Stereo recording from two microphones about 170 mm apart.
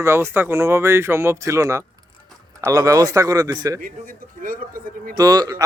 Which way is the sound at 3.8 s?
55° right (ahead or behind).